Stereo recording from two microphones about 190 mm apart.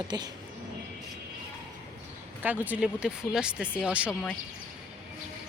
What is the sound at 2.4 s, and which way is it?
Speech, 10° right (ahead or behind).